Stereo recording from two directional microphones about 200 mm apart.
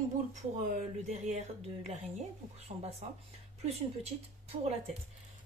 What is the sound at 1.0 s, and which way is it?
A woman's voice, 35° right (ahead or behind).